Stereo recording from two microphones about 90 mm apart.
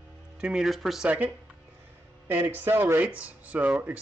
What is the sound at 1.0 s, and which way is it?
Speech, 15° right (ahead or behind).